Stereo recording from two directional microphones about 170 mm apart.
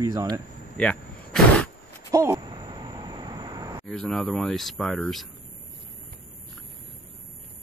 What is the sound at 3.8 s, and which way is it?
Speech, 5° left (ahead or behind).